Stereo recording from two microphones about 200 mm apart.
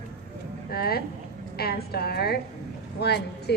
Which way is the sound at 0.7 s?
50° left (ahead or behind).